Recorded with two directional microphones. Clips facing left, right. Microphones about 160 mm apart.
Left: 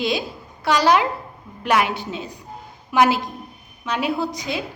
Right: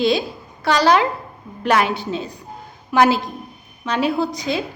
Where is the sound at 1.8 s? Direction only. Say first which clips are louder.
Right 4 dB; 35° right (ahead or behind).